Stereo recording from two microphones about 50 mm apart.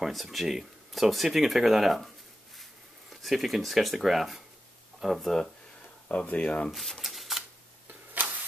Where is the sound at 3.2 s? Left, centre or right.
Centre.